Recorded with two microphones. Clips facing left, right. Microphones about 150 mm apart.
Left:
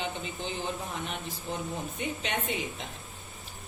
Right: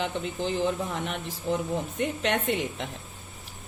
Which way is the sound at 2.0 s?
75° right (ahead or behind).